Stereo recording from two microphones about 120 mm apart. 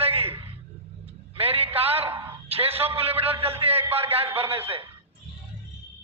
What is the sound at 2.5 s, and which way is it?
A man's voice, 55° right (ahead or behind).